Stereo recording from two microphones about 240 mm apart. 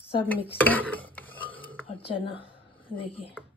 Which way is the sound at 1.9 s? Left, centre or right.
Left.